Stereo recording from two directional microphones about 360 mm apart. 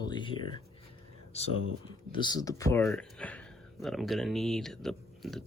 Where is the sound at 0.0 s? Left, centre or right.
Centre.